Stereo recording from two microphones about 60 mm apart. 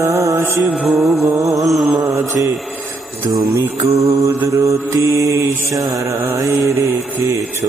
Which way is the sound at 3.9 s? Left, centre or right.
Right.